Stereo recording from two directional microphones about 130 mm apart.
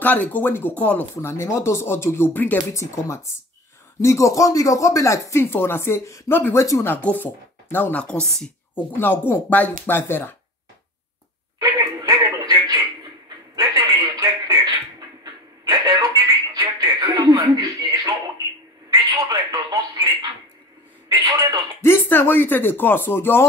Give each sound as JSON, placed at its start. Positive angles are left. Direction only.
{"t": 0.0, "sound": "speech", "side_deg": 15}
{"t": 11.6, "sound": "a sound", "side_deg": -30}
{"t": 18.9, "sound": "telephone", "side_deg": -30}
{"t": 21.8, "sound": "speech", "side_deg": 20}